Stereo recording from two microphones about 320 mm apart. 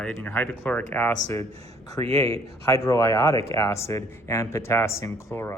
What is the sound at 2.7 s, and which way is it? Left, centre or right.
Speech, centre.